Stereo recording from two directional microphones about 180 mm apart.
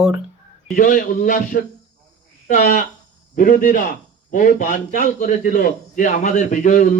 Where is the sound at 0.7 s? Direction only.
50° left (ahead or behind).